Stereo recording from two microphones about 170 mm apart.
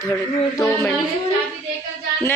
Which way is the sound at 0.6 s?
20° left (ahead or behind).